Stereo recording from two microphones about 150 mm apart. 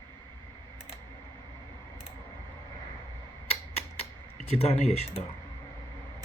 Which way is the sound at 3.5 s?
45° left (ahead or behind).